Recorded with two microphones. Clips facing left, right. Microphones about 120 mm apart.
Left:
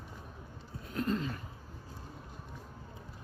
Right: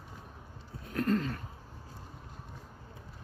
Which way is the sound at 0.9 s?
55° right (ahead or behind).